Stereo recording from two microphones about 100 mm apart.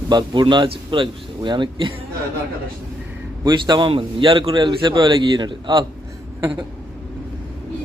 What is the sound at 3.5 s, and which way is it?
A man's voice, 50° right (ahead or behind).